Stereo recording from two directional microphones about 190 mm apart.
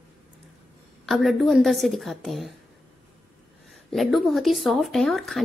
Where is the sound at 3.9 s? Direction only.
Centre (ahead or behind).